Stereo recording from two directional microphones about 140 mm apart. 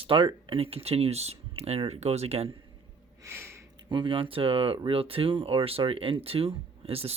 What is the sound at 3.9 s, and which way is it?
Speech, 35° right (ahead or behind).